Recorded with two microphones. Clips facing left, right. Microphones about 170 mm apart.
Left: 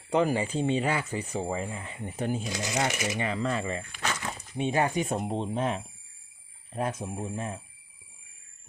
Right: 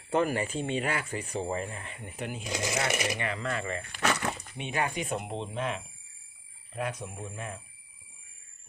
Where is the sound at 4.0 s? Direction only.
65° right (ahead or behind).